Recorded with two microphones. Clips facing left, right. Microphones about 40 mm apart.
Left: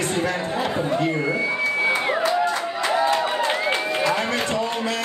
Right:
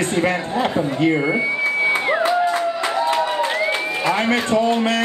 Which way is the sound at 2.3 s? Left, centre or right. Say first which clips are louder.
Right 4 dB; centre.